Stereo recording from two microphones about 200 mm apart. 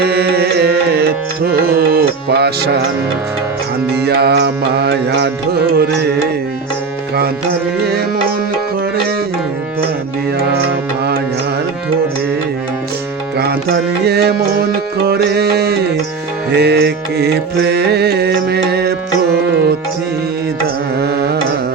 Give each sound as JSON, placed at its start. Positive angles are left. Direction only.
{"t": 0.0, "sound": "music", "side_deg": -50}
{"t": 3.8, "sound": "music", "side_deg": -55}
{"t": 10.3, "sound": "music", "side_deg": -50}
{"t": 13.3, "sound": "music", "side_deg": -55}
{"t": 21.0, "sound": "carnatic music", "side_deg": -50}